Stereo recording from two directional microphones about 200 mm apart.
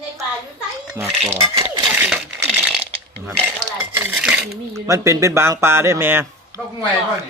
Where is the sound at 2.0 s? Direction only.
10° right (ahead or behind).